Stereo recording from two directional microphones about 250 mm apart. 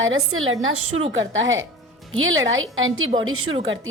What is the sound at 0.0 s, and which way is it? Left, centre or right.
A woman's voice, right.